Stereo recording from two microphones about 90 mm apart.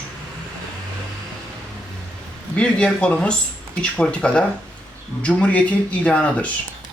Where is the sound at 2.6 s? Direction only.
10° left (ahead or behind).